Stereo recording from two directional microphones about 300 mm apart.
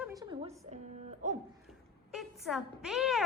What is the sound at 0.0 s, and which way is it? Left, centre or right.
Music, centre.